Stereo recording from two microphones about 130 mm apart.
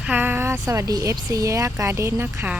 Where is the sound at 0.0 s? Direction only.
15° right (ahead or behind).